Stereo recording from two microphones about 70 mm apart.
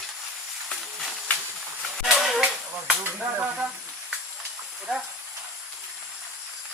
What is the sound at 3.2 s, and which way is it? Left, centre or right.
Stir, centre.